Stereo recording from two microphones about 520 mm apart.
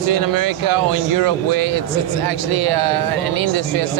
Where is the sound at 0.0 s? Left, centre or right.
Right.